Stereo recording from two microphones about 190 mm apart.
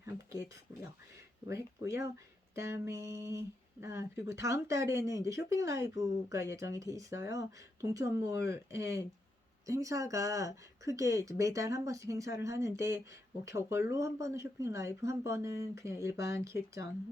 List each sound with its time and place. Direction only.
0.0 s speech: 15° right (ahead or behind)